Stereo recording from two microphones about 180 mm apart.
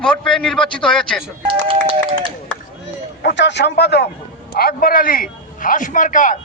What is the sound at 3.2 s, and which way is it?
A man's voice, 75° left (ahead or behind).